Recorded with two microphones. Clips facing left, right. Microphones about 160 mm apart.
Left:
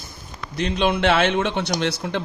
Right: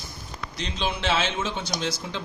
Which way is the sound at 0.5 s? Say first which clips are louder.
Left 9 dB; 60° left (ahead or behind).